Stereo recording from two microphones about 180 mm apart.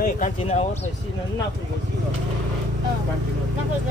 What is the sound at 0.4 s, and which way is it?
Speech, 35° left (ahead or behind).